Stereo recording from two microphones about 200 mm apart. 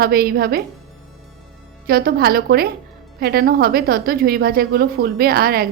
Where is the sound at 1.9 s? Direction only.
50° right (ahead or behind).